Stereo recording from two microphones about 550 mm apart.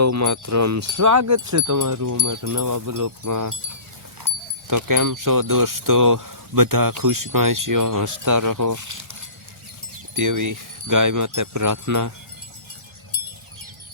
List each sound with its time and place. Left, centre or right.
0.0 s speech: right
4.7 s speech: right
10.2 s speech: right